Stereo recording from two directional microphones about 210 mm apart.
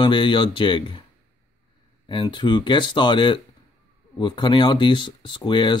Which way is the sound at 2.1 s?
25° left (ahead or behind).